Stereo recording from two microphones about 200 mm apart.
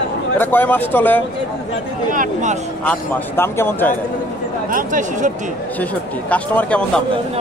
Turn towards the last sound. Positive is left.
turn(degrees=5)  # may be behind; listen again after turning